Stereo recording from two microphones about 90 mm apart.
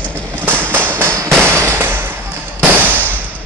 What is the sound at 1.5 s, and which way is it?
Fireworks, 30° right (ahead or behind).